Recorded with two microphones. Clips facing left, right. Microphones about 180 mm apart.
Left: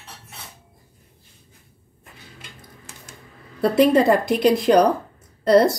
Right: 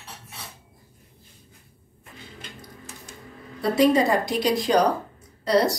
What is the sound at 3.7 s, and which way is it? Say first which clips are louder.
A woman's voice: left 3 dB; 55° left (ahead or behind).